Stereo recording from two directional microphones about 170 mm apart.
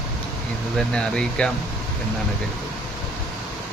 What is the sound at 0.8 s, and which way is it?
Speech, 5° left (ahead or behind).